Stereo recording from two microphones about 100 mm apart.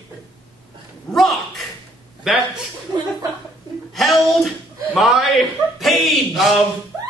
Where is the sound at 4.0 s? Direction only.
Centre (ahead or behind).